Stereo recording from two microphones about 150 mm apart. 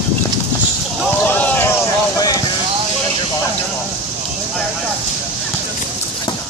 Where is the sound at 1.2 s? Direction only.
10° left (ahead or behind).